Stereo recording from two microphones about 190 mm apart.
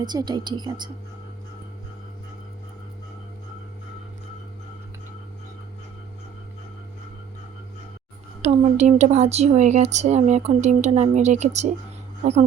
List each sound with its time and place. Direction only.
0.0 s speech: 20° right (ahead or behind)
8.4 s speech: 35° right (ahead or behind)